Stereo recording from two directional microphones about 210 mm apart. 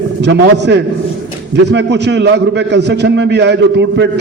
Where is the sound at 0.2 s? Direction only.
55° right (ahead or behind).